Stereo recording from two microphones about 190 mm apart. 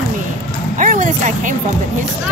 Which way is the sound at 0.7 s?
45° right (ahead or behind).